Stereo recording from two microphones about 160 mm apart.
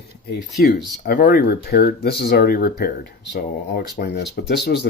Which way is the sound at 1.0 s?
70° left (ahead or behind).